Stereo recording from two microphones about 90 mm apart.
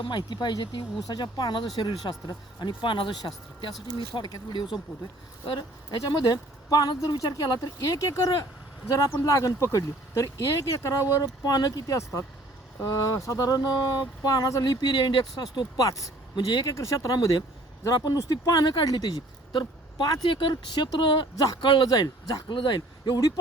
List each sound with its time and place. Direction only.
0.0 s speech: 55° left (ahead or behind)
1.0 s speech: 50° left (ahead or behind)
5.9 s speech: 45° left (ahead or behind)
15.5 s speech: 40° left (ahead or behind)
22.5 s speech: 55° left (ahead or behind)